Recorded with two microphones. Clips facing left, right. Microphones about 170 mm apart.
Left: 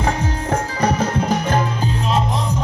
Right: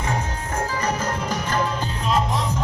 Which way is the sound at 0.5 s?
65° left (ahead or behind).